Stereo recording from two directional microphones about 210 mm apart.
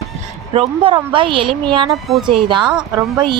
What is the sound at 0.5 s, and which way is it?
A woman's voice, 25° right (ahead or behind).